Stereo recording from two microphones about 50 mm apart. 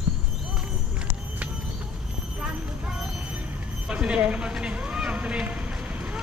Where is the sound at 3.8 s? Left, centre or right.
Right.